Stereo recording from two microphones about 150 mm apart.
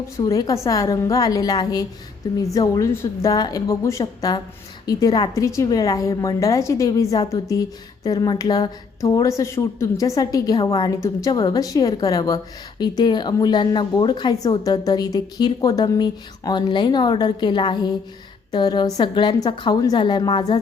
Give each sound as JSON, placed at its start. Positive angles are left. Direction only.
{"t": 0.2, "sound": "speech", "side_deg": 20}